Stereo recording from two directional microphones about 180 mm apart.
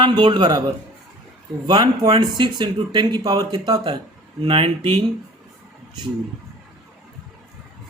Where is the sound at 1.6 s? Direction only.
20° right (ahead or behind).